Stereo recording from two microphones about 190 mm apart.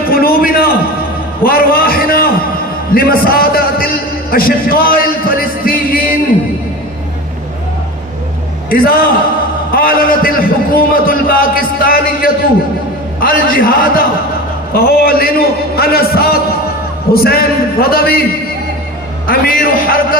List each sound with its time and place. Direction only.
0.1 s a sound: 50° left (ahead or behind)
8.6 s a man's voice: 50° left (ahead or behind)
19.2 s a man's voice: 50° left (ahead or behind)